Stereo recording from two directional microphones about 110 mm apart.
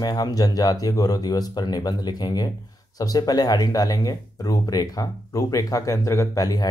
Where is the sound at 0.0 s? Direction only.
35° left (ahead or behind).